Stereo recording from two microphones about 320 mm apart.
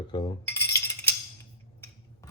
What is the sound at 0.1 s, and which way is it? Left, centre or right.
Cutlery, centre.